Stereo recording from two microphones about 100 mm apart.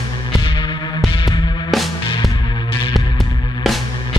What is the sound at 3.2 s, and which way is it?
Music, 50° left (ahead or behind).